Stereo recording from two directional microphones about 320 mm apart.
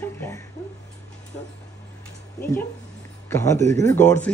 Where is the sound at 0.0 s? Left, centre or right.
Centre.